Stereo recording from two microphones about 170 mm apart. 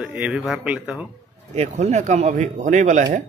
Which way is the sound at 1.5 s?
40° right (ahead or behind).